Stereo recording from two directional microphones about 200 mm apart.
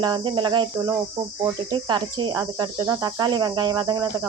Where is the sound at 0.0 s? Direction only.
20° right (ahead or behind).